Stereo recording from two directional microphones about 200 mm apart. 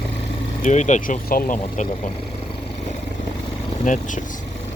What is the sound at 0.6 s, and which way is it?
Speech, 35° left (ahead or behind).